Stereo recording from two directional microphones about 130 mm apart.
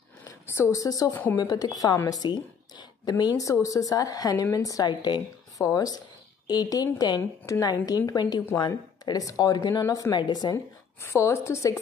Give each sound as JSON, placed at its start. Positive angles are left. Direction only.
{"t": 0.2, "sound": "a woman's voice", "side_deg": 25}
{"t": 2.8, "sound": "a sound", "side_deg": 35}
{"t": 3.6, "sound": "a woman's voice", "side_deg": 25}